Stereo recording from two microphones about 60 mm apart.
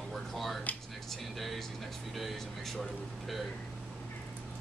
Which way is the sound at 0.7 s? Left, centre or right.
Left.